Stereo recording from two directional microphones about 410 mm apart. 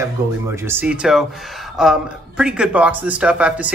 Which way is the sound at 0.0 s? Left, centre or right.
Centre.